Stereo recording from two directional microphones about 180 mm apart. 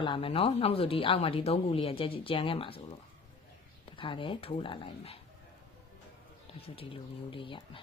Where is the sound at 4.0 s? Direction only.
30° left (ahead or behind).